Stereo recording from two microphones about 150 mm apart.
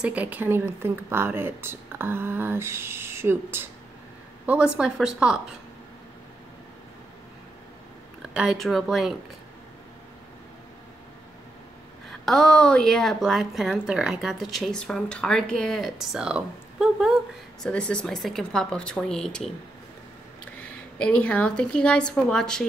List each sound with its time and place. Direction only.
0.0 s a woman's voice: 10° right (ahead or behind)
8.3 s a woman's voice: 5° right (ahead or behind)
12.1 s a woman's voice: centre (ahead or behind)
17.6 s a woman's voice: 5° left (ahead or behind)
20.5 s a woman's voice: 10° left (ahead or behind)